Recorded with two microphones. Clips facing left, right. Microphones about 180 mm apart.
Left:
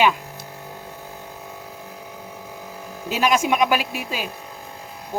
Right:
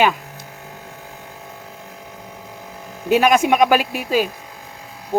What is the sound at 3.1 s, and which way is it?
Speech, 60° right (ahead or behind).